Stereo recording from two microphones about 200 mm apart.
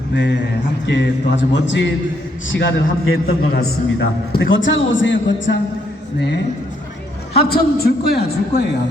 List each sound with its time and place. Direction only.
0.1 s a man's voice: 60° left (ahead or behind); by 3.3 s 80° left
3.5 s a man's voice: 55° left (ahead or behind)
4.5 s a man's voice: 70° left (ahead or behind); by 8.6 s 55° left (ahead or behind)